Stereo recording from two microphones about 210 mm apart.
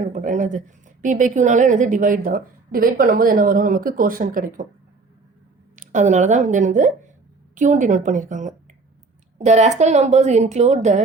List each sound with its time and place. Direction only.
0.0 s a woman's voice: 35° right (ahead or behind)
5.7 s a woman's voice: 35° right (ahead or behind)